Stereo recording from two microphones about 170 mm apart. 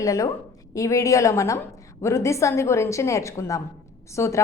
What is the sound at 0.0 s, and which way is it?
A woman's voice, 20° left (ahead or behind).